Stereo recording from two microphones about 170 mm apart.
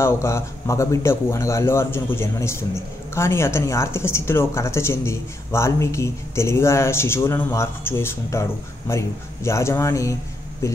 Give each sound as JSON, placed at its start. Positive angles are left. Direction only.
{"t": 0.0, "sound": "speech", "side_deg": 15}